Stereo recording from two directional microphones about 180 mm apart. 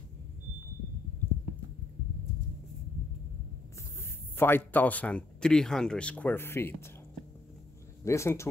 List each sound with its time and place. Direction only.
4.4 s speech: 10° left (ahead or behind)
8.0 s speech: 15° left (ahead or behind)